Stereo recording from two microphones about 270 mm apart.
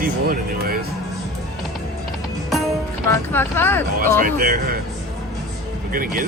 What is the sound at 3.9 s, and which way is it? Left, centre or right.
Speech, right.